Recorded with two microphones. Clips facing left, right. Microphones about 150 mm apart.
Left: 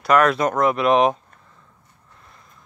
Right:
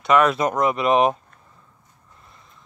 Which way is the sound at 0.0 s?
Centre (ahead or behind).